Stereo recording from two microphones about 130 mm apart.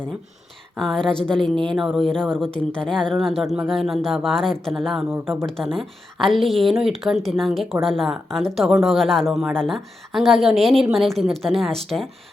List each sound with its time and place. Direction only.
0.8 s a woman's voice: 5° left (ahead or behind)
5.1 s speech: 15° right (ahead or behind)
5.7 s a woman's voice: centre (ahead or behind)